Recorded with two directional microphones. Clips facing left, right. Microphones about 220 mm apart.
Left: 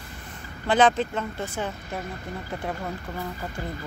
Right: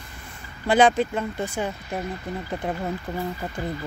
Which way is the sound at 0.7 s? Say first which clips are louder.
Right 2 dB; 10° right (ahead or behind).